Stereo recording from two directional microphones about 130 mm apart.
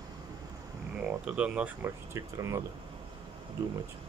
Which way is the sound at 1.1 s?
10° right (ahead or behind).